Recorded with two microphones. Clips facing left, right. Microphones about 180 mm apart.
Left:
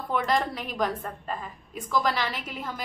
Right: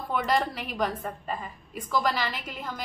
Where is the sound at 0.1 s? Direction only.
5° right (ahead or behind).